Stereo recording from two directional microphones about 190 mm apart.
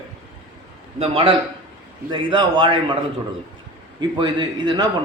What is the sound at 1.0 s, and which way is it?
A man's voice, 30° right (ahead or behind).